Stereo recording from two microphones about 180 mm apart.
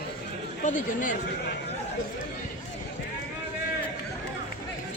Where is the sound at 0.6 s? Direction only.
45° left (ahead or behind).